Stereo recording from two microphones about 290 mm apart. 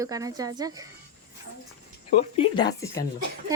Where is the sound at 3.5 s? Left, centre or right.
Centre.